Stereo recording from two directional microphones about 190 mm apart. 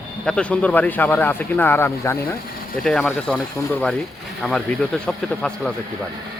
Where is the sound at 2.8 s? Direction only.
5° left (ahead or behind).